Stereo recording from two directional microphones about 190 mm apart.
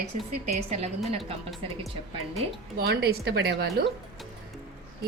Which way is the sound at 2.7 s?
55° right (ahead or behind).